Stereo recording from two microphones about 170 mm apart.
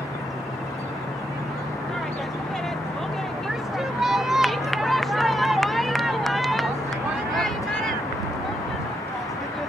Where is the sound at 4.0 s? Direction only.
Centre (ahead or behind).